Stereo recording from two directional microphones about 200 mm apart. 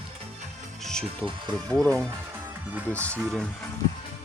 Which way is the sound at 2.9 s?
5° left (ahead or behind).